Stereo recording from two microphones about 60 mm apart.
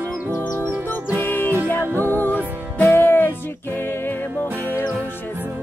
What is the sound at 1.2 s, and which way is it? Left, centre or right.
Music, left.